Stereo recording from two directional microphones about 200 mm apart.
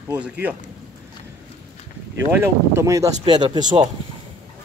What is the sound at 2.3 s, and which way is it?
Speech, 10° right (ahead or behind).